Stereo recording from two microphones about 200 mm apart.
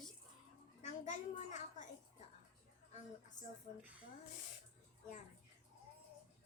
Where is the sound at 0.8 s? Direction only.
40° left (ahead or behind).